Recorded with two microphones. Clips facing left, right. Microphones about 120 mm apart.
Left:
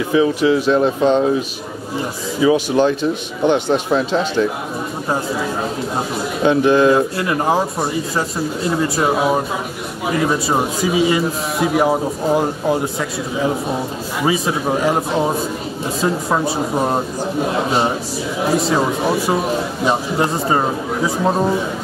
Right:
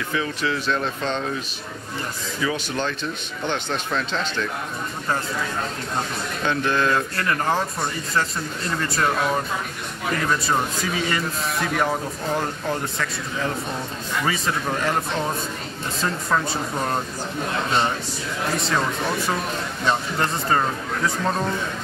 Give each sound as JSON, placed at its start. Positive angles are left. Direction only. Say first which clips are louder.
{"t": 0.1, "sound": "speech", "louder": "left 12 dB", "side_deg": 15}
{"t": 2.4, "sound": "speech", "louder": "left 12 dB", "side_deg": 15}
{"t": 11.9, "sound": "speech", "louder": "left 8 dB", "side_deg": 30}
{"t": 12.4, "sound": "speech", "louder": "left 8 dB", "side_deg": 5}
{"t": 16.5, "sound": "speech", "louder": "left 7 dB", "side_deg": 25}
{"t": 20.4, "sound": "speech", "louder": "left 5 dB", "side_deg": 20}